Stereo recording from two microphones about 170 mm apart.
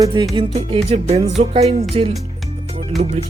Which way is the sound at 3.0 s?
45° right (ahead or behind).